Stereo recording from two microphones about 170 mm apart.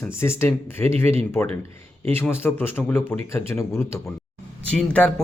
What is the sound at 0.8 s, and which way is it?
Speech, 40° right (ahead or behind).